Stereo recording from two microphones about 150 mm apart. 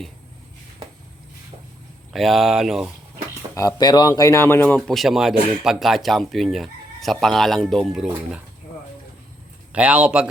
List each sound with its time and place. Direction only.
2.1 s speech: centre (ahead or behind)
3.5 s speech: 20° left (ahead or behind)
4.8 s speech: centre (ahead or behind)
9.7 s a man's voice: 10° right (ahead or behind)